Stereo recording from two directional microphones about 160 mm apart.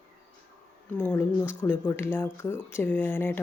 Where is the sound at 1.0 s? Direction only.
10° left (ahead or behind).